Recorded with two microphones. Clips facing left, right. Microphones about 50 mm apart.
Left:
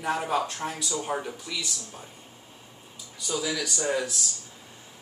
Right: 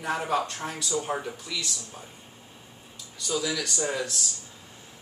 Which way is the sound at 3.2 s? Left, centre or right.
Centre.